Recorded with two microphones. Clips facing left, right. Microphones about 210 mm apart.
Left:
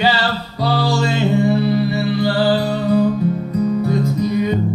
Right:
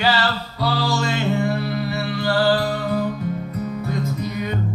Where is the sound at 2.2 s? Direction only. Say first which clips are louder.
Left 1 dB; 15° left (ahead or behind).